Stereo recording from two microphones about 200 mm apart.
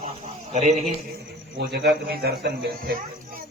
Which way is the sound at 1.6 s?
55° right (ahead or behind).